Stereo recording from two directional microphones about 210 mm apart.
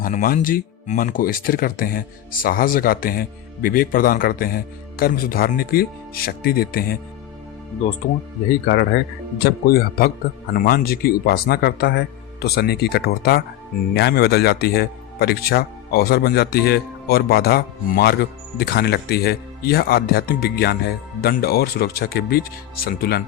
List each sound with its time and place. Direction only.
0.0 s speech: 40° left (ahead or behind)
9.4 s speech: 45° left (ahead or behind)